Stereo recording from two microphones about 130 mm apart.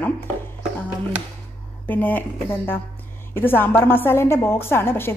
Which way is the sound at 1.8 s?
15° left (ahead or behind).